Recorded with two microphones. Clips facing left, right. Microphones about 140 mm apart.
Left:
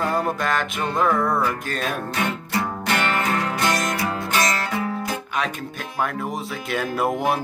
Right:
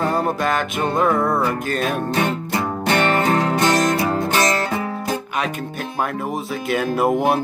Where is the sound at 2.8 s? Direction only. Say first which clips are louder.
Right 7 dB; 35° right (ahead or behind).